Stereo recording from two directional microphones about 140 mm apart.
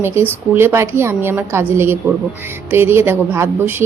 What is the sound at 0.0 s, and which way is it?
Speech, 15° right (ahead or behind).